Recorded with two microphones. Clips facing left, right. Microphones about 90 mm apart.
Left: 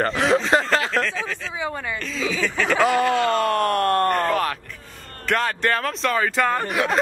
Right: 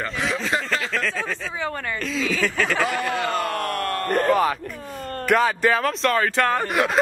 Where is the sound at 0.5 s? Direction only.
75° left (ahead or behind).